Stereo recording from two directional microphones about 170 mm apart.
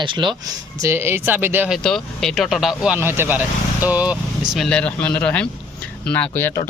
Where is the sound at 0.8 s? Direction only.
15° right (ahead or behind).